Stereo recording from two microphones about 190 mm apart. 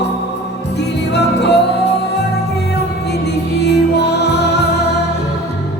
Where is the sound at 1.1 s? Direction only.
65° left (ahead or behind).